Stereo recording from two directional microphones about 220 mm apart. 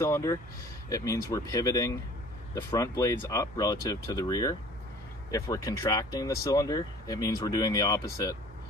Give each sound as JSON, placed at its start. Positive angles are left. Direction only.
{"t": 0.0, "sound": "speech", "side_deg": 15}